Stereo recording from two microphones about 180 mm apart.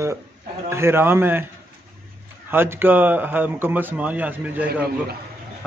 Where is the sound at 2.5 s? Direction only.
10° right (ahead or behind).